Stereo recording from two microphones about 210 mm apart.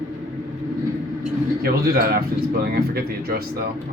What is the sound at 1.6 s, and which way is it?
Speech, 45° right (ahead or behind).